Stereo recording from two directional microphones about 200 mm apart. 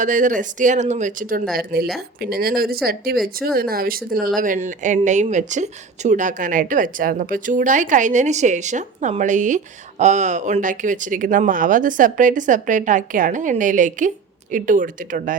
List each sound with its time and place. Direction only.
0.0 s speech: 40° right (ahead or behind)